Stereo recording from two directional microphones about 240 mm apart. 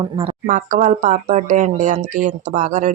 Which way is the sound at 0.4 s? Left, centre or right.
Right.